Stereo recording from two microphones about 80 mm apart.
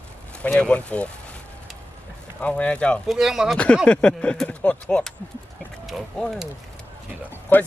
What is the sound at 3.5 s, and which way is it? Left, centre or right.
Speech, centre.